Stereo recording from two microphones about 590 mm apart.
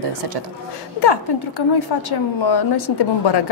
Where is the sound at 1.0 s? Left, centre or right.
Left.